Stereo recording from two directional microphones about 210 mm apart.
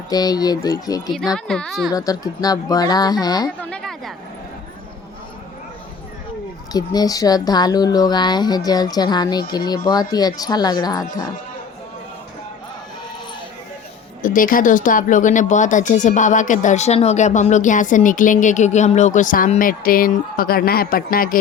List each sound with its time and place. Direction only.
0.1 s speech: 20° left (ahead or behind)
1.1 s speech: centre (ahead or behind)
1.9 s speech: 15° left (ahead or behind)
3.6 s a sound: 5° left (ahead or behind)
6.7 s speech: 20° left (ahead or behind)
14.2 s speech: 40° left (ahead or behind)